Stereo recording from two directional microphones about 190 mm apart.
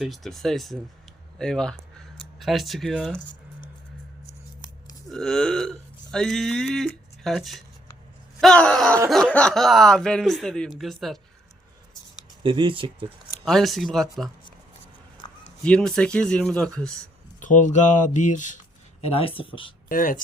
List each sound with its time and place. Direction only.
0.0 s speech: centre (ahead or behind)
5.0 s speech: centre (ahead or behind)
12.4 s speech: 25° right (ahead or behind)
13.4 s speech: centre (ahead or behind)
15.6 s speech: 5° left (ahead or behind)
17.4 s speech: 40° left (ahead or behind)
19.0 s speech: 30° left (ahead or behind)
19.9 s speech: 45° left (ahead or behind)